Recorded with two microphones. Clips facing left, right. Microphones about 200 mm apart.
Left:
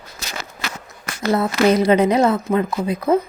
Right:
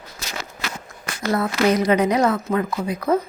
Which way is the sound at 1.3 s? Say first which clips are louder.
Left 3 dB; 25° left (ahead or behind).